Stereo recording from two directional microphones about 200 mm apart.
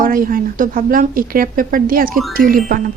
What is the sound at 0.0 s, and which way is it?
Speech, 45° right (ahead or behind).